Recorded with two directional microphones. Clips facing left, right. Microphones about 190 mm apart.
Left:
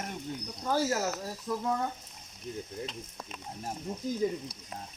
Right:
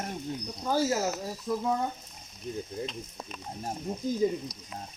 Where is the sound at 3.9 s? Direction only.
15° right (ahead or behind).